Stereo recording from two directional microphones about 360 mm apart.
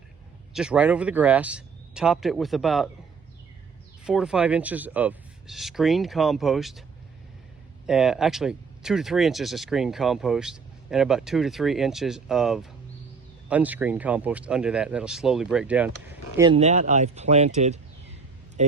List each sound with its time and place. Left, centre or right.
0.5 s speech: centre
4.0 s speech: centre
7.9 s speech: centre
16.4 s speech: centre